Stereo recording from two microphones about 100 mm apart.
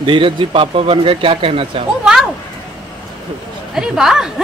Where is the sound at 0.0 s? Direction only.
60° right (ahead or behind).